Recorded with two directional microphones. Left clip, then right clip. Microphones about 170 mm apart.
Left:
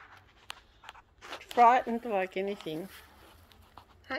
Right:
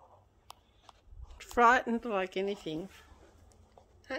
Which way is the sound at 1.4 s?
30° right (ahead or behind).